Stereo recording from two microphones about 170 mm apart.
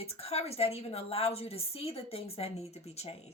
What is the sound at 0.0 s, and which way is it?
A woman's voice, 35° left (ahead or behind).